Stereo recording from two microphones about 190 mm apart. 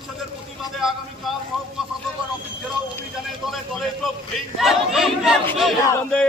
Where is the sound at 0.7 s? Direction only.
Centre (ahead or behind).